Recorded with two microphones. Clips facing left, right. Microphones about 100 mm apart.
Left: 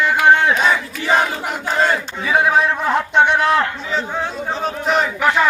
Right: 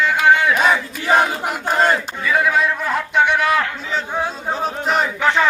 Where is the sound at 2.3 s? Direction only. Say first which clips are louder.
Left 2 dB; 30° left (ahead or behind).